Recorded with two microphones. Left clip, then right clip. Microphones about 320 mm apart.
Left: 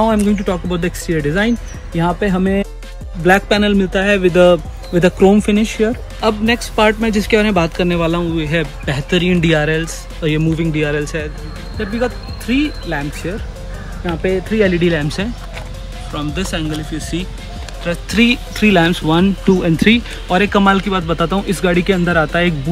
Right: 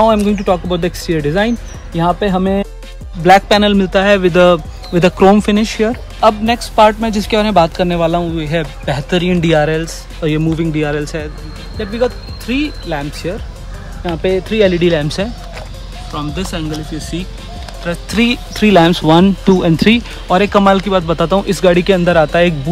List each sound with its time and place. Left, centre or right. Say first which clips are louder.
0.0 s speech: right 4 dB; centre
16.2 s speech: even; centre